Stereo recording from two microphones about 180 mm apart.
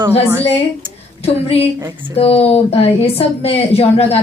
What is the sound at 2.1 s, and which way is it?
Speech, 35° left (ahead or behind).